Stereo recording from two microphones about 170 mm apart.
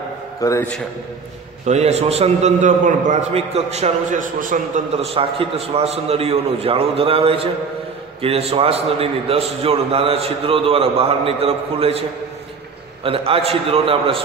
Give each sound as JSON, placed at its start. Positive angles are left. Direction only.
{"t": 0.4, "sound": "a man's voice", "side_deg": 20}
{"t": 1.7, "sound": "a man's voice", "side_deg": -40}
{"t": 4.9, "sound": "a man's voice", "side_deg": -35}
{"t": 13.0, "sound": "a man's voice", "side_deg": -35}